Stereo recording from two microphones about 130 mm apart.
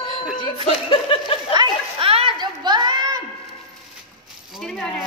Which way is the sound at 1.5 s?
40° right (ahead or behind).